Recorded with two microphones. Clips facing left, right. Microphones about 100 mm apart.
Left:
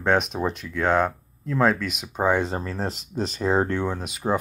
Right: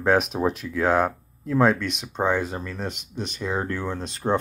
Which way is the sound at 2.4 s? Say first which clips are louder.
Left 3 dB; 30° left (ahead or behind).